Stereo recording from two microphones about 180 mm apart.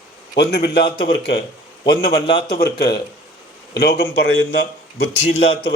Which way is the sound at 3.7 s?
65° left (ahead or behind).